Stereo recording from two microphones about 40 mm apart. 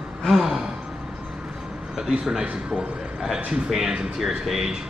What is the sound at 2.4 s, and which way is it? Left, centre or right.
Speech, right.